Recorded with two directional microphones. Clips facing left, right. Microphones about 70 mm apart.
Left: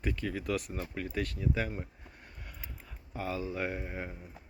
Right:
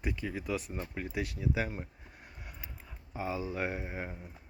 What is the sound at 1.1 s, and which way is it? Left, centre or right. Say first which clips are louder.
Speech: even; centre.